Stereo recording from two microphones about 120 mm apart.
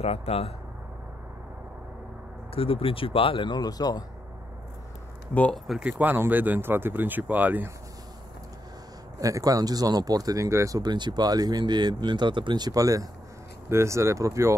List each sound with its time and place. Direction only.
0.0 s speech: 60° left (ahead or behind)
2.5 s speech: 50° left (ahead or behind); by 4.0 s 35° left (ahead or behind)
5.3 s speech: 10° left (ahead or behind)
5.7 s speech: 10° right (ahead or behind)
9.2 s speech: 30° right (ahead or behind)